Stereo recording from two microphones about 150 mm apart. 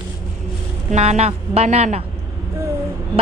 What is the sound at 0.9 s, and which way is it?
A man's voice, 45° right (ahead or behind).